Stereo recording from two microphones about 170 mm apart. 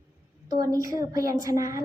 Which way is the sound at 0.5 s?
20° right (ahead or behind).